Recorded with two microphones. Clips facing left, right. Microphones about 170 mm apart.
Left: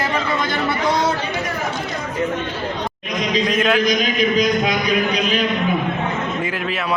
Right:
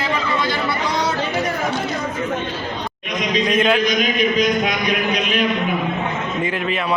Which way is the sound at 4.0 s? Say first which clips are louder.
Even; 35° left (ahead or behind).